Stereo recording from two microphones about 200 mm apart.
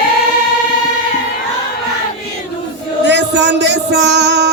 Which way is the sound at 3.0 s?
60° right (ahead or behind).